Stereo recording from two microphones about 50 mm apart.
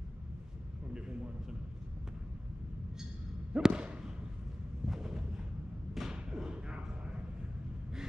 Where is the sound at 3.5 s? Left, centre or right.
Centre.